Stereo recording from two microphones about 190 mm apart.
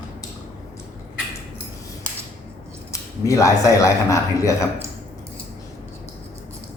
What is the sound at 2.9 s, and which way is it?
Speech, 15° left (ahead or behind).